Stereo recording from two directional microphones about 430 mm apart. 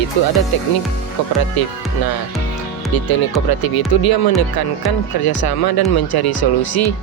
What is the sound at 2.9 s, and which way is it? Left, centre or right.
Speech, left.